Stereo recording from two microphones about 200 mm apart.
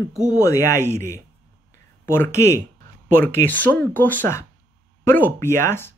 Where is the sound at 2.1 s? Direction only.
15° left (ahead or behind).